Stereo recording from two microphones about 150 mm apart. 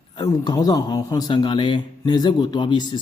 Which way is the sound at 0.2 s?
25° left (ahead or behind).